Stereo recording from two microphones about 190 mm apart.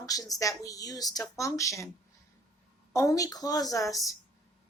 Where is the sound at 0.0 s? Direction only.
20° left (ahead or behind).